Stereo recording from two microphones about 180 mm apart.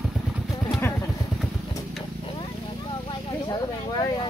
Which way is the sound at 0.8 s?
15° left (ahead or behind).